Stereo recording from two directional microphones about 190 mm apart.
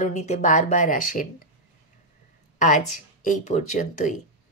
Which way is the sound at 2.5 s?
45° left (ahead or behind).